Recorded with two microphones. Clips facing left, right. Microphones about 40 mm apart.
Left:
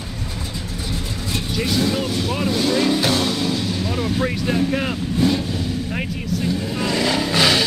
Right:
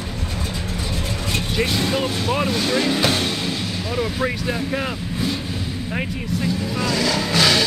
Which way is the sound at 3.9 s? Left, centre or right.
Centre.